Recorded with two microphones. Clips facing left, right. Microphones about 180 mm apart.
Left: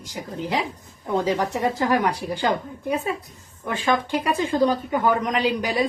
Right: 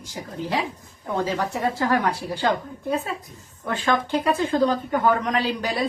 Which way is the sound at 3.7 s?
10° left (ahead or behind).